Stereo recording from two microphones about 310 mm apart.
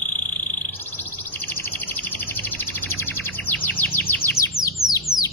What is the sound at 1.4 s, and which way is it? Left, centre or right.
Bird, centre.